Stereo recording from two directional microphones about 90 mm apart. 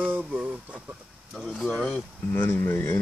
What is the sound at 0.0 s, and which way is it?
Speech, 20° right (ahead or behind).